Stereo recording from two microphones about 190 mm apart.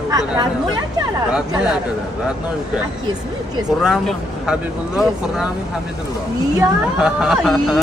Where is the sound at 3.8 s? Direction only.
Centre (ahead or behind).